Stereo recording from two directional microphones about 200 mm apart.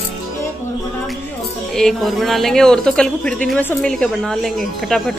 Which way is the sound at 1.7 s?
Centre (ahead or behind).